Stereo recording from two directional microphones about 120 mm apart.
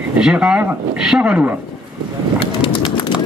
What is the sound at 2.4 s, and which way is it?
Bird, 45° left (ahead or behind).